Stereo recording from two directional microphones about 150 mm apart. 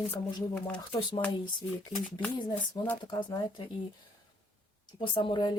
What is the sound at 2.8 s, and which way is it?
Speech, 30° left (ahead or behind).